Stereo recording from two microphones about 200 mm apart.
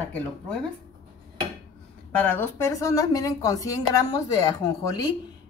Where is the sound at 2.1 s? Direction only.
10° left (ahead or behind).